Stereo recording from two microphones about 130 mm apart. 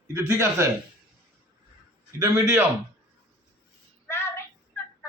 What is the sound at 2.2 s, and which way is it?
Speech, 20° right (ahead or behind).